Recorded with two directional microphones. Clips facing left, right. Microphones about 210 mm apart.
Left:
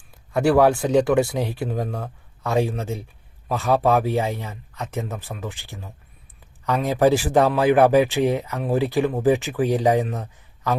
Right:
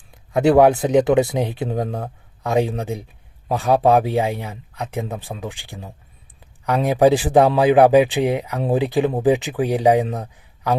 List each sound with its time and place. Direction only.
0.3 s speech: 20° right (ahead or behind)